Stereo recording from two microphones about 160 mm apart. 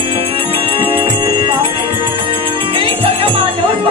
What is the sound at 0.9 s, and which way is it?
Music, 30° right (ahead or behind).